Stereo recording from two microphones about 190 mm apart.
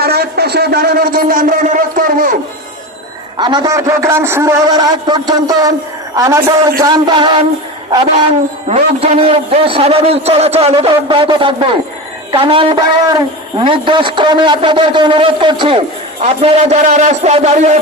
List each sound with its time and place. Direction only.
0.0 s a sound: 55° right (ahead or behind)
3.3 s a man's voice: 25° right (ahead or behind)
8.7 s a man's voice: 30° right (ahead or behind)
16.2 s a man's voice: 35° right (ahead or behind)